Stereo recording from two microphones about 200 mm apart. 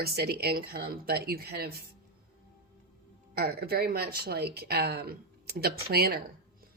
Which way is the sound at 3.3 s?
50° right (ahead or behind).